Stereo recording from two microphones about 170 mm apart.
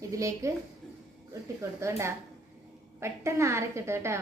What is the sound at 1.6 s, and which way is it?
A woman's voice, 15° right (ahead or behind).